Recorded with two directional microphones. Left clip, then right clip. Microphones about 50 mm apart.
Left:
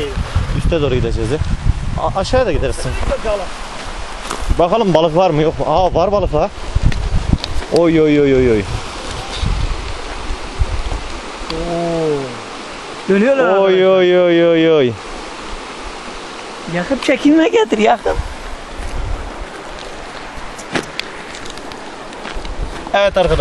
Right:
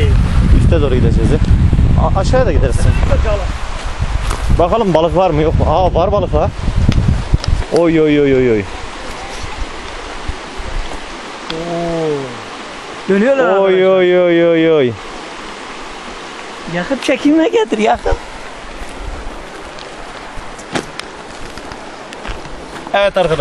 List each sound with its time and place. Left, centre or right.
0.3 s speech: centre
3.0 s speech: right
4.3 s speech: centre
7.8 s speech: centre
8.2 s speech: centre
11.5 s a sound: right
13.1 s speech: right
13.6 s speech: centre
17.0 s speech: left
20.7 s a sound: right
22.8 s speech: centre